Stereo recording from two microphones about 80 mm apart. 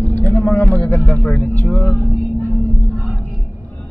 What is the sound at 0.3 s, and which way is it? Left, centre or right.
A man's voice, left.